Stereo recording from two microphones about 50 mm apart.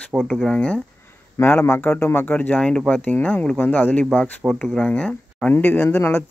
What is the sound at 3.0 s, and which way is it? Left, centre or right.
Speech, left.